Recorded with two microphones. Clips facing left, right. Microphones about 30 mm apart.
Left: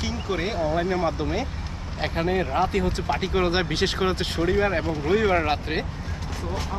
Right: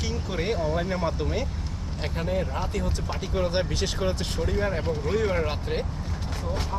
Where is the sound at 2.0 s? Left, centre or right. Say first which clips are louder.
Left 4 dB; left.